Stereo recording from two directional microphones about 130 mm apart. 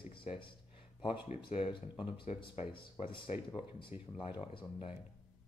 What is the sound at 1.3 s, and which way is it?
Speech, 55° left (ahead or behind).